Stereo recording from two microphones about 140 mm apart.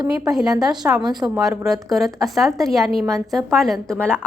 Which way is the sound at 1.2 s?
Centre (ahead or behind).